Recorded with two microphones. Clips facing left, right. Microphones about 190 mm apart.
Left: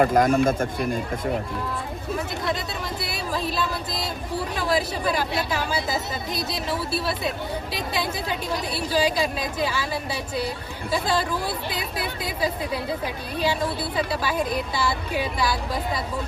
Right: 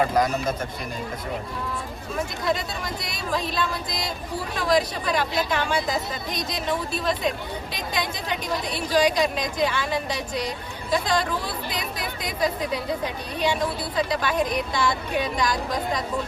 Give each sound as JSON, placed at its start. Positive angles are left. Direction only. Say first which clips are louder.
{"t": 0.0, "sound": "speech", "louder": "left 4 dB", "side_deg": 50}
{"t": 2.6, "sound": "speech", "louder": "left 1 dB", "side_deg": 5}
{"t": 13.4, "sound": "speech", "louder": "even", "side_deg": 5}